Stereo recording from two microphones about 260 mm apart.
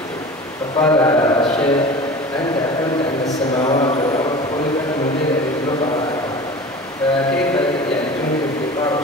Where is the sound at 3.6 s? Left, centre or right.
Centre.